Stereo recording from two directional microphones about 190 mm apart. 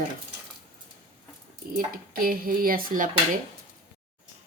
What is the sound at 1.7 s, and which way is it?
Speech, 50° right (ahead or behind).